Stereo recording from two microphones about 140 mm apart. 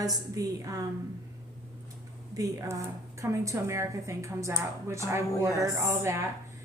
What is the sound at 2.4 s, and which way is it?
A woman's voice, 25° right (ahead or behind).